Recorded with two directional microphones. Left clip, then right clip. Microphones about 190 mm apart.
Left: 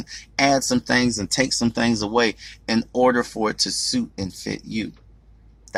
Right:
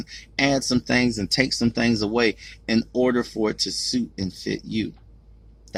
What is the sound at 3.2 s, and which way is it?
Speech, 35° left (ahead or behind).